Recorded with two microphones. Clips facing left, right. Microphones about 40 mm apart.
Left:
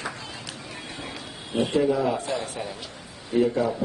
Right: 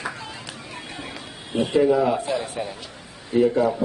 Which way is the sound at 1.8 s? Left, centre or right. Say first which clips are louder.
Right 5 dB; centre.